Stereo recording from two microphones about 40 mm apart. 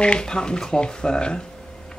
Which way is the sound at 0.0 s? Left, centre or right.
Left.